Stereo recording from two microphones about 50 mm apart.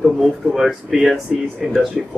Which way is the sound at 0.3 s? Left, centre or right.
Centre.